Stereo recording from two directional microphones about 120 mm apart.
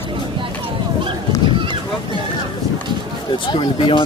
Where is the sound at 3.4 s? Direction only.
45° left (ahead or behind).